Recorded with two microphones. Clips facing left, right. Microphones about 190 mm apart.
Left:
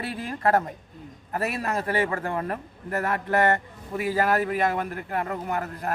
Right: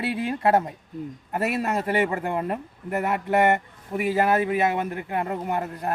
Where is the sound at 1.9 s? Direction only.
20° right (ahead or behind).